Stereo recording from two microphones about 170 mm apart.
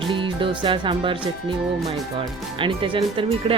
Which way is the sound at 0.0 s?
30° right (ahead or behind).